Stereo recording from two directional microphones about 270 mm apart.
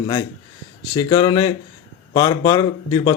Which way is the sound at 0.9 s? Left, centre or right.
Centre.